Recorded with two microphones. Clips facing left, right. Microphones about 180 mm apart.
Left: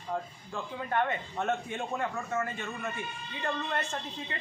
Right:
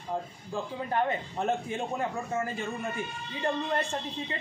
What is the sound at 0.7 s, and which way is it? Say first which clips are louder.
A man's voice: right 1 dB; 30° right (ahead or behind).